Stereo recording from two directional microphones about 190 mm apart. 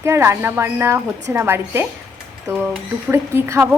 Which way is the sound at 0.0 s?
15° right (ahead or behind).